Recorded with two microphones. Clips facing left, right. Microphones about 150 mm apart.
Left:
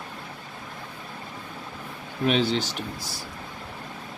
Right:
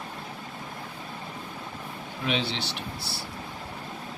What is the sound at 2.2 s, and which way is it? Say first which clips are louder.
Speech: left 7 dB; 45° left (ahead or behind).